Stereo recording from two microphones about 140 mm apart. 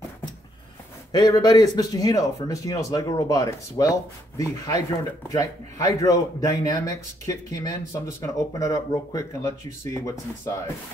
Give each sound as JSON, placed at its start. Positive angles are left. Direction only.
{"t": 1.1, "sound": "a man's voice", "side_deg": 30}